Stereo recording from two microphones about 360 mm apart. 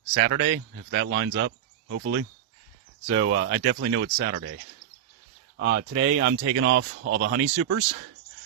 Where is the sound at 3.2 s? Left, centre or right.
Right.